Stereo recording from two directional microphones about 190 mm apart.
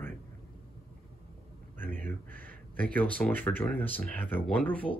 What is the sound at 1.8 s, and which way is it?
Speech, 10° left (ahead or behind).